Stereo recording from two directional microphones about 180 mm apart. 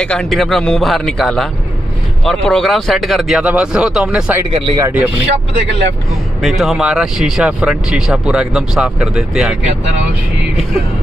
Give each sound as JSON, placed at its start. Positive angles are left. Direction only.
{"t": 0.0, "sound": "speech", "side_deg": 5}
{"t": 4.5, "sound": "speech", "side_deg": -30}
{"t": 4.7, "sound": "speech", "side_deg": -15}
{"t": 6.4, "sound": "speech", "side_deg": 0}